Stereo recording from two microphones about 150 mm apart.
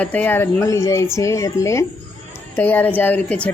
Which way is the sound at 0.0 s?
10° left (ahead or behind).